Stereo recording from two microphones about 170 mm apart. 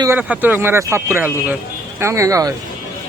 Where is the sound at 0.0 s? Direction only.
10° right (ahead or behind).